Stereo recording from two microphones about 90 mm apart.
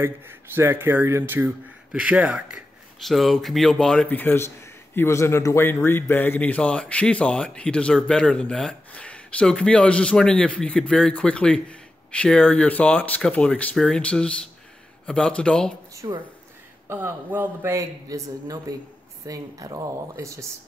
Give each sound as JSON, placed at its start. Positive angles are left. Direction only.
{"t": 0.0, "sound": "speech", "side_deg": -25}
{"t": 3.0, "sound": "speech", "side_deg": 0}
{"t": 16.0, "sound": "speech", "side_deg": -40}
{"t": 16.8, "sound": "speech", "side_deg": -25}
{"t": 17.7, "sound": "speech", "side_deg": -40}